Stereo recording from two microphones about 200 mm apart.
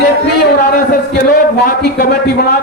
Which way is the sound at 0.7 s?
50° left (ahead or behind).